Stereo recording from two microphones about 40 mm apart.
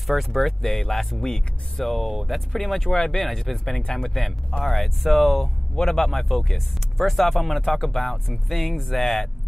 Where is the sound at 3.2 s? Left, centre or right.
Centre.